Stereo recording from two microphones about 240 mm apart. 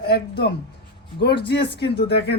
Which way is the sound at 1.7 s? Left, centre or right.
Left.